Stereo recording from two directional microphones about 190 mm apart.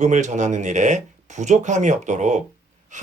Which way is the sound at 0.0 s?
40° right (ahead or behind).